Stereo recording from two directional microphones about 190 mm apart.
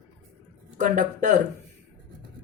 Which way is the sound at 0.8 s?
40° right (ahead or behind).